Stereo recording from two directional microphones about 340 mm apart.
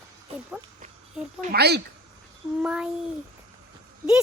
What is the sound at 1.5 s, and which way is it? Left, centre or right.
Speech, right.